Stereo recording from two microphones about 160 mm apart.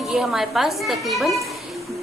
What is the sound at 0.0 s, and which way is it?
A woman's voice, centre (ahead or behind).